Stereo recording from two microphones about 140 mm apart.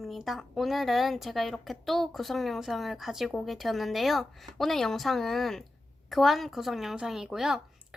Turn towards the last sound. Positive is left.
turn(degrees=-5)  # may be behind; listen again after turning